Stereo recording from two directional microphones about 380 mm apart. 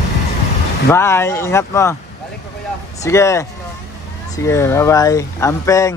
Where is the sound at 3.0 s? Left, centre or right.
Centre.